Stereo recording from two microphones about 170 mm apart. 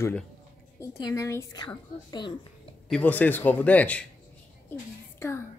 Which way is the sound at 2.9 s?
10° left (ahead or behind).